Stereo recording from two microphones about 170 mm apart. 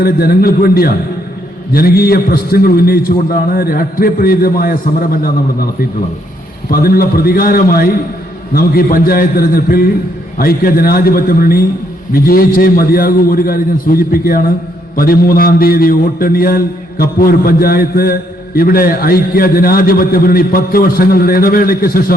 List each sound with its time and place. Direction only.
0.0 s a man's voice: 60° left (ahead or behind)
6.7 s a man's voice: 60° left (ahead or behind)